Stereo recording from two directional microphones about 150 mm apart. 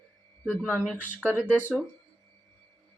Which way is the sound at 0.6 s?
10° right (ahead or behind).